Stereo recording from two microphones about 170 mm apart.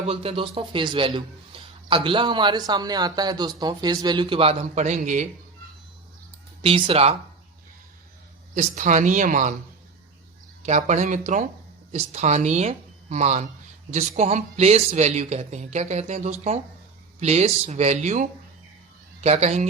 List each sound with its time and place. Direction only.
0.1 s a man's voice: 35° right (ahead or behind)
6.6 s speech: 30° right (ahead or behind)
8.5 s speech: 45° right (ahead or behind)
10.6 s speech: 45° right (ahead or behind)